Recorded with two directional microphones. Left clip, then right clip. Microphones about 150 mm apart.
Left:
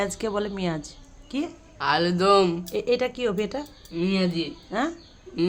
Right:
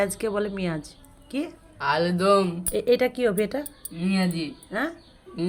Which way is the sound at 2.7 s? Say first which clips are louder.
Right 3 dB; 20° right (ahead or behind).